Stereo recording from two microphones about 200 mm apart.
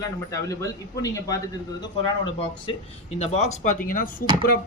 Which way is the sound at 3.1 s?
35° left (ahead or behind).